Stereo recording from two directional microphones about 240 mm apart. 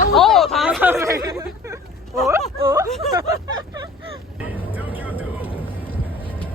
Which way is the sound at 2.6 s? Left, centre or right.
Centre.